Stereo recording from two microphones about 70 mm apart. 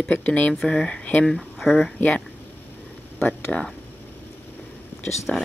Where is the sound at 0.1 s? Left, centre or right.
Centre.